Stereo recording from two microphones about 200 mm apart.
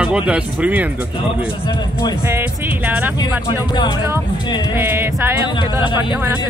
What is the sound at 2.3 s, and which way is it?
Speech, 10° right (ahead or behind).